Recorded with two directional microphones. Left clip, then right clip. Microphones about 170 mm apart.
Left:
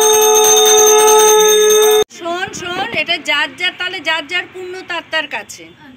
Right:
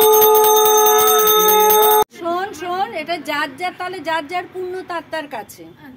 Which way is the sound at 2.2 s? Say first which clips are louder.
Left 1 dB; 35° right (ahead or behind).